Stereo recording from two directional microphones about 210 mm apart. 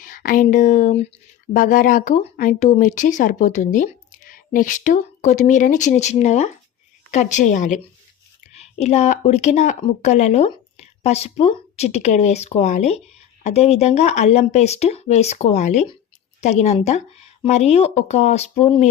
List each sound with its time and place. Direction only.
0.0 s speech: 40° left (ahead or behind)